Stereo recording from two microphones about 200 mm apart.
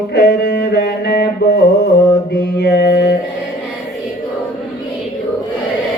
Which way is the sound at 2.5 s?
55° left (ahead or behind).